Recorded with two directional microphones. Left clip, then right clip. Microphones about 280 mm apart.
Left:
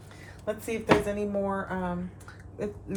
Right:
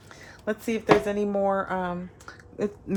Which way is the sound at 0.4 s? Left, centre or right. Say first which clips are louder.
Right 3 dB; right.